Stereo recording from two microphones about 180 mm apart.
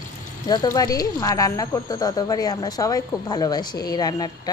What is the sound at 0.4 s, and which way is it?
Speech, 20° left (ahead or behind).